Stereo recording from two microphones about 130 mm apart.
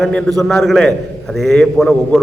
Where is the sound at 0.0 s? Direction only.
5° left (ahead or behind).